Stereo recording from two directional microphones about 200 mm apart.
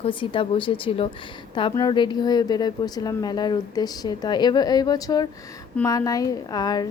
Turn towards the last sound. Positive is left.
turn(degrees=20)  # may be behind; listen again after turning